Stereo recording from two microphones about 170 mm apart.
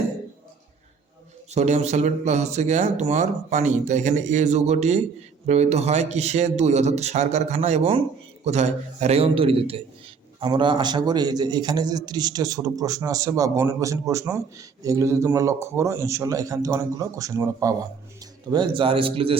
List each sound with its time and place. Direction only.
1.5 s a man's voice: 40° right (ahead or behind); by 17.7 s 20° right (ahead or behind)
18.5 s speech: 30° right (ahead or behind)